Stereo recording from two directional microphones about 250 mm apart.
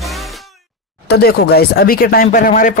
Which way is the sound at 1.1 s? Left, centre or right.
Left.